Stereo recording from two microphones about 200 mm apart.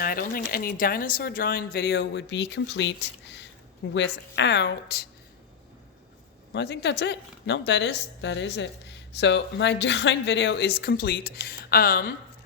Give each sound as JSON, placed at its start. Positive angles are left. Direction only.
{"t": 0.0, "sound": "a woman's voice", "side_deg": 45}
{"t": 6.5, "sound": "a woman's voice", "side_deg": 60}